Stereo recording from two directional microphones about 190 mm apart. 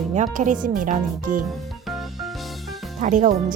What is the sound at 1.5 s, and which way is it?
Music, centre (ahead or behind).